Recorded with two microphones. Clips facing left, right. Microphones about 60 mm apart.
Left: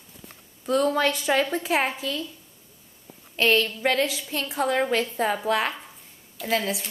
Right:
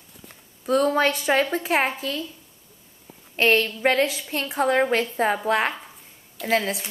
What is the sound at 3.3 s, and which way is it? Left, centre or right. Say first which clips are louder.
A woman's voice: right 2 dB; right.